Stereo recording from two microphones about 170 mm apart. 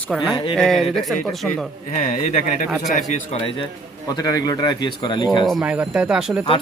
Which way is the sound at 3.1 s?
35° left (ahead or behind).